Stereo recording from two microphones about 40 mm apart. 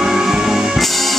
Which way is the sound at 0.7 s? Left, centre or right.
Centre.